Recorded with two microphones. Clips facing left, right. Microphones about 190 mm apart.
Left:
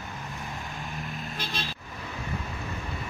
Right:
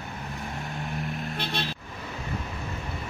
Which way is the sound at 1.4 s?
65° right (ahead or behind).